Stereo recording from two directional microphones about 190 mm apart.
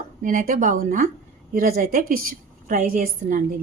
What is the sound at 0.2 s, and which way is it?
A woman's voice, 45° right (ahead or behind).